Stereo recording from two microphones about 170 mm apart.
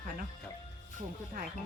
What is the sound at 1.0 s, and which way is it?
Speech, 50° right (ahead or behind).